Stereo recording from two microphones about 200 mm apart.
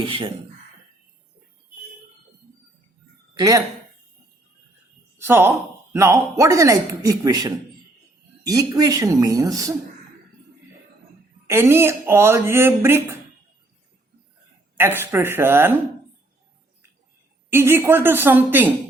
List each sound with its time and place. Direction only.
0.0 s speech: 25° right (ahead or behind)
3.3 s speech: 15° right (ahead or behind)
5.1 s speech: 10° right (ahead or behind)
11.4 s speech: 10° right (ahead or behind)
14.8 s speech: 10° right (ahead or behind)
17.5 s speech: 10° right (ahead or behind)